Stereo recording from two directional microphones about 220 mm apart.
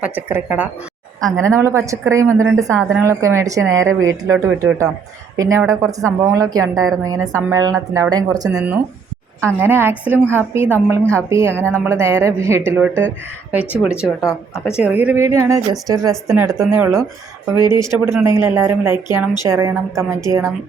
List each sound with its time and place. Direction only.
0.0 s a woman's voice: 10° right (ahead or behind)
3.8 s a woman's voice: 65° right (ahead or behind)
4.4 s a woman's voice: 15° right (ahead or behind)
11.0 s speech: 5° left (ahead or behind)
11.3 s a woman's voice: 10° right (ahead or behind)